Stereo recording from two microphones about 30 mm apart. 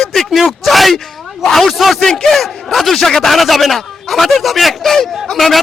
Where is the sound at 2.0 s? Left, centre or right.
Left.